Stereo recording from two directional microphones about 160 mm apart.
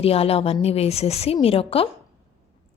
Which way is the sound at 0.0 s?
40° left (ahead or behind).